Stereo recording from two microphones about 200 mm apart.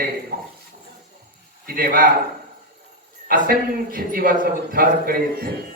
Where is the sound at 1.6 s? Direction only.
50° right (ahead or behind).